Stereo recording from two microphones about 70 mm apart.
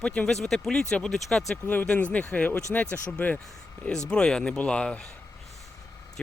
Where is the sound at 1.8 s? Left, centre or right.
Centre.